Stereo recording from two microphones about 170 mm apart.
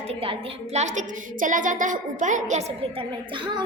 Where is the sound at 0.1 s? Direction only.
35° right (ahead or behind).